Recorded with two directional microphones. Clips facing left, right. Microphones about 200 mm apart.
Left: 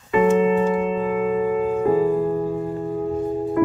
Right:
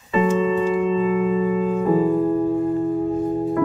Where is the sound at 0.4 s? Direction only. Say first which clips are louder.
Left 1 dB; 55° left (ahead or behind).